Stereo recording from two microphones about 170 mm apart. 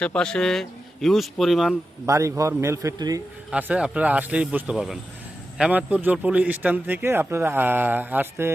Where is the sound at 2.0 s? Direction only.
20° right (ahead or behind).